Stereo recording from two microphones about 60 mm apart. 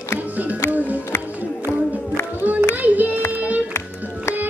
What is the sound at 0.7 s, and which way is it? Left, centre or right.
Music, right.